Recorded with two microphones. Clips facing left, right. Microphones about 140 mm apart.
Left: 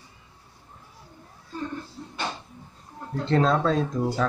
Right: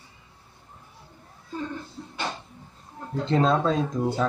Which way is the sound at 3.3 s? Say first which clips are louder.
Even; 5° right (ahead or behind).